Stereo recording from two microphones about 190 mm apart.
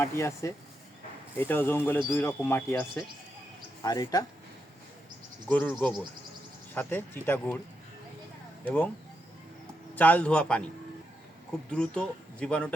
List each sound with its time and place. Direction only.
0.0 s speech: 15° left (ahead or behind)
5.5 s speech: 10° left (ahead or behind)
6.7 s speech: 10° left (ahead or behind)
8.6 s speech: 10° left (ahead or behind)
9.9 s speech: 10° left (ahead or behind)
11.7 s speech: 5° left (ahead or behind)